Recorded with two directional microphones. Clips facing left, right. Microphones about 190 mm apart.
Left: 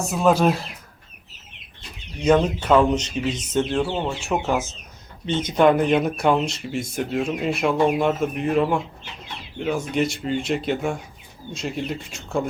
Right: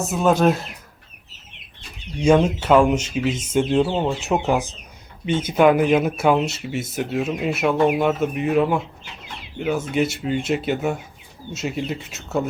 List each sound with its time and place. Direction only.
0.0 s speech: centre (ahead or behind)
2.1 s speech: 10° right (ahead or behind)
9.9 s speech: 5° right (ahead or behind)